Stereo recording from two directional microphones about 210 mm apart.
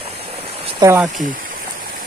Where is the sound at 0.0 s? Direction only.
25° right (ahead or behind).